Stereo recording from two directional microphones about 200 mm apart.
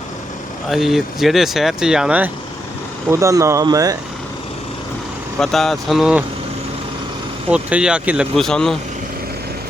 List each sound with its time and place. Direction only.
0.7 s speech: centre (ahead or behind); by 3.9 s 20° right (ahead or behind)
5.4 s speech: centre (ahead or behind)
7.5 s speech: 5° right (ahead or behind)